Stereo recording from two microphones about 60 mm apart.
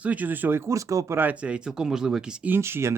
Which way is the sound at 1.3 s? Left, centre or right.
Centre.